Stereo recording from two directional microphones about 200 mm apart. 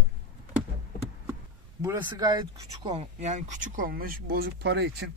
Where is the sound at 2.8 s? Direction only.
35° right (ahead or behind); by 5.1 s 60° right (ahead or behind).